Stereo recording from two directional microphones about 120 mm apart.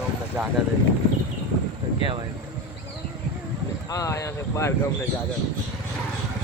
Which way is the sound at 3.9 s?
30° left (ahead or behind).